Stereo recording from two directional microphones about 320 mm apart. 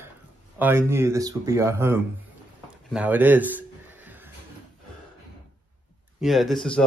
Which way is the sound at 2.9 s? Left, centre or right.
Centre.